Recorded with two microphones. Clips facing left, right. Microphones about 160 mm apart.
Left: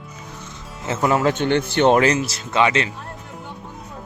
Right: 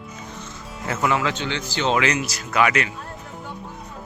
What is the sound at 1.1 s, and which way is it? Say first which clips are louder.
Speech: left 7 dB; 45° left (ahead or behind).